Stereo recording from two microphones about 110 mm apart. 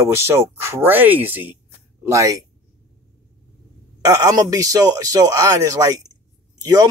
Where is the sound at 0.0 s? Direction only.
25° right (ahead or behind).